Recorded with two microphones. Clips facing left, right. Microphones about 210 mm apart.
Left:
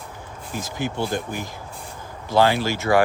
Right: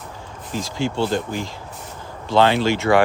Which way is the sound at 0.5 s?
20° left (ahead or behind).